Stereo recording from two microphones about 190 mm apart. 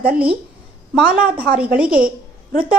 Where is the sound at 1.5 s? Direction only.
5° right (ahead or behind).